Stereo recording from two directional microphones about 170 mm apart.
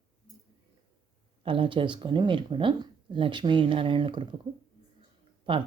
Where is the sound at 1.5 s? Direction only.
30° right (ahead or behind).